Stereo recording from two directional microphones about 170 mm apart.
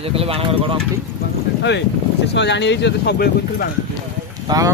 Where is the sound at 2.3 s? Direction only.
90° left.